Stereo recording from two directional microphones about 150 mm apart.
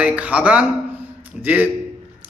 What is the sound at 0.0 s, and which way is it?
Speech, 10° right (ahead or behind).